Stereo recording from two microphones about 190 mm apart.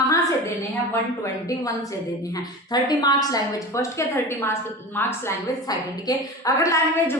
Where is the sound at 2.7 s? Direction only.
20° left (ahead or behind).